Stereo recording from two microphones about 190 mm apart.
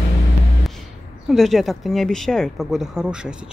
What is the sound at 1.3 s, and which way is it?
Speech, centre (ahead or behind).